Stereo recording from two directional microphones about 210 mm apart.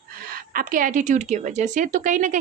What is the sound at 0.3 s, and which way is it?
A woman's voice, 45° right (ahead or behind).